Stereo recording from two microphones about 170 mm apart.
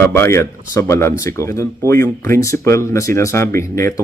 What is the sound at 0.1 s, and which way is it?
Speech, 15° left (ahead or behind).